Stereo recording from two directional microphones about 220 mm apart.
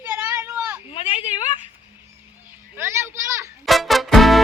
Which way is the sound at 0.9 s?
25° left (ahead or behind).